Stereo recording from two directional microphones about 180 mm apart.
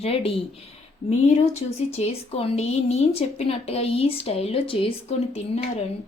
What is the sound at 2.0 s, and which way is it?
Speech, 35° left (ahead or behind).